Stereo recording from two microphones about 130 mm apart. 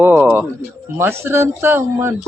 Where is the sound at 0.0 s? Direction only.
15° right (ahead or behind).